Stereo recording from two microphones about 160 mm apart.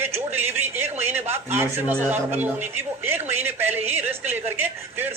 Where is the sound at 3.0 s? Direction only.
15° right (ahead or behind).